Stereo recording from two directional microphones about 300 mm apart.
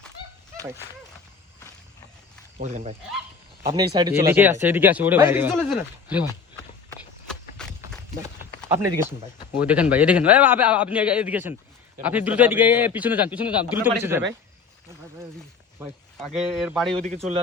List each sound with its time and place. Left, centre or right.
2.6 s speech: right
3.6 s speech: centre
7.6 s run: centre
9.6 s a man's voice: centre
16.1 s a man's voice: centre
16.9 s speech: right